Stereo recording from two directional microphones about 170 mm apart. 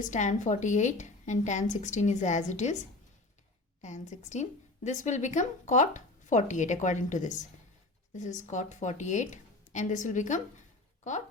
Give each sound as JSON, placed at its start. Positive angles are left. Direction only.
{"t": 0.0, "sound": "a woman's voice", "side_deg": 45}
{"t": 3.8, "sound": "a woman's voice", "side_deg": 45}